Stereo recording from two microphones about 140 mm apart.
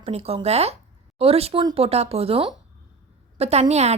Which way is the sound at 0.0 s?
45° right (ahead or behind).